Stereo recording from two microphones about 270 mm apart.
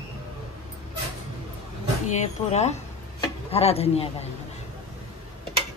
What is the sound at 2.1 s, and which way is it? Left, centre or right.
Speech, left.